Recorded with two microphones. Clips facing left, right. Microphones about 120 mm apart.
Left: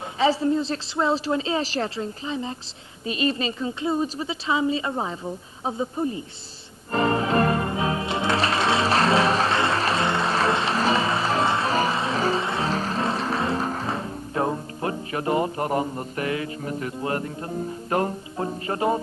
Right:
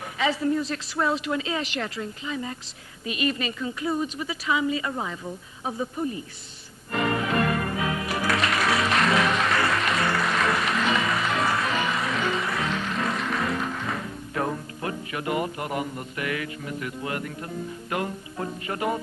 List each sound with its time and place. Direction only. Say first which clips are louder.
0.2 s speech: left 3 dB; 30° left (ahead or behind)
6.9 s music: left 4 dB; 30° left (ahead or behind)